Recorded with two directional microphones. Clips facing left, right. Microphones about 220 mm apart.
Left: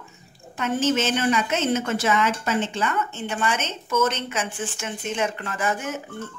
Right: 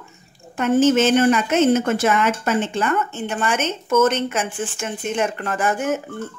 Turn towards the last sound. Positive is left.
turn(degrees=-50)  # may be behind; listen again after turning